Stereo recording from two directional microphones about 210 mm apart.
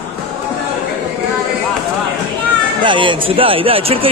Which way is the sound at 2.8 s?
25° right (ahead or behind).